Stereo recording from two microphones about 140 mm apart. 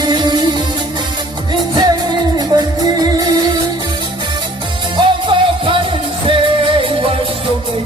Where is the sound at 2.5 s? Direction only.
30° right (ahead or behind).